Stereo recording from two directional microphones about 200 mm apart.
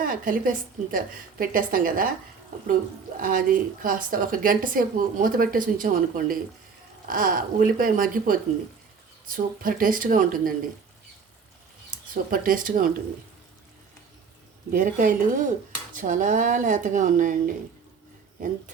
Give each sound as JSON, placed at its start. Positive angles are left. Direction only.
{"t": 0.0, "sound": "a woman's voice", "side_deg": -45}
{"t": 12.1, "sound": "a woman's voice", "side_deg": -45}
{"t": 14.7, "sound": "speech", "side_deg": -40}